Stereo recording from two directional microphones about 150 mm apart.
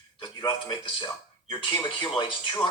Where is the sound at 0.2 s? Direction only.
30° left (ahead or behind).